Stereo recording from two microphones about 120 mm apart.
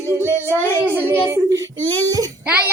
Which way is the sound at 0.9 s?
20° right (ahead or behind).